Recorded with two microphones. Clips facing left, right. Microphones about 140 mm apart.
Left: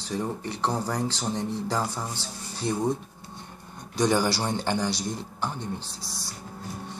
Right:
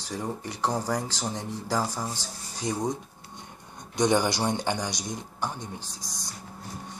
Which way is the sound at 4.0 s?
20° right (ahead or behind).